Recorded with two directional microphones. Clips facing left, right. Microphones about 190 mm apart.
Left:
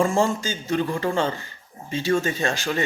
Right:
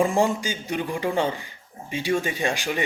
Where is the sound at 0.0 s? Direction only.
15° right (ahead or behind).